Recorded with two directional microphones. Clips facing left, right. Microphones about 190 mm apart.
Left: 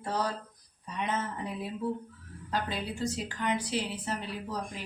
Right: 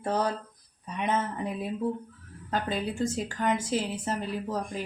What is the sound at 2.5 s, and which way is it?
Speech, 50° right (ahead or behind).